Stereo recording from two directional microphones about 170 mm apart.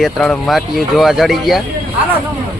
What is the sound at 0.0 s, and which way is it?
Speech, centre (ahead or behind).